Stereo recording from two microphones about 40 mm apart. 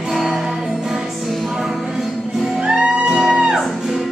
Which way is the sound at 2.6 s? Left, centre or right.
Centre.